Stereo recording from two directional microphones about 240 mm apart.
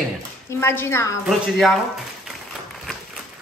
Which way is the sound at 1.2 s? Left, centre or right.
Centre.